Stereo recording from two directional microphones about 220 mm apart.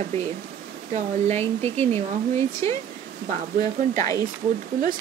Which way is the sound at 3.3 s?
35° right (ahead or behind).